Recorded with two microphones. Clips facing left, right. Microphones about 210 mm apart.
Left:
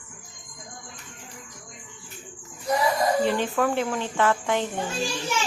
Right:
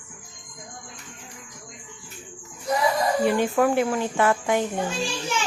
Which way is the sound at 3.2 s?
10° right (ahead or behind).